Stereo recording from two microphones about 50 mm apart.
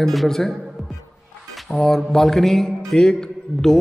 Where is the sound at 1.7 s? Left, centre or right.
Centre.